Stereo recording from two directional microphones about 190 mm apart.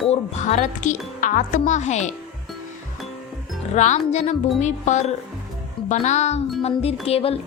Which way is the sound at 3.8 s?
40° left (ahead or behind).